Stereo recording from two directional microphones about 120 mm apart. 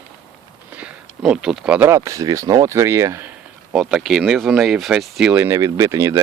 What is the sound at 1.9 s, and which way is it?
Speech, 25° right (ahead or behind).